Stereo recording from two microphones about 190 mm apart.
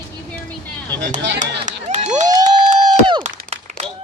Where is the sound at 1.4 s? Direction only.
40° right (ahead or behind).